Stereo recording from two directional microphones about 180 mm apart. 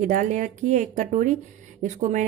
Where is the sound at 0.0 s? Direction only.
45° right (ahead or behind).